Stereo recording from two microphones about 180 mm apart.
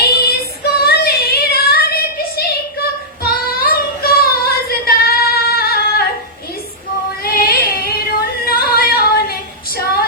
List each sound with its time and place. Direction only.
0.0 s child singing: 60° left (ahead or behind)
7.3 s singing: 55° left (ahead or behind)